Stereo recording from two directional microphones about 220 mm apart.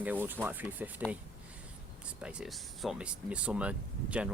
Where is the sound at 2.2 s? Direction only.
5° right (ahead or behind).